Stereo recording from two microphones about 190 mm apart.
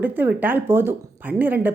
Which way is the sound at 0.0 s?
10° right (ahead or behind).